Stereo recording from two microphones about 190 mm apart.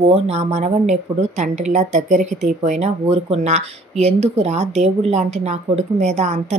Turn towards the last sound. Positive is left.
turn(degrees=-35)  # may be behind; listen again after turning